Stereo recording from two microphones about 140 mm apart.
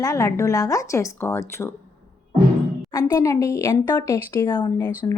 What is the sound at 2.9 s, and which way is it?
A woman's voice, 20° left (ahead or behind).